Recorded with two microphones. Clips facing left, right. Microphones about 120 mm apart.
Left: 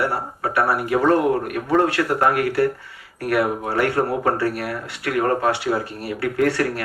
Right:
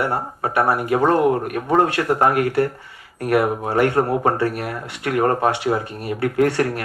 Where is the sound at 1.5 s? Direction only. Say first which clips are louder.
Right 1 dB; 25° right (ahead or behind).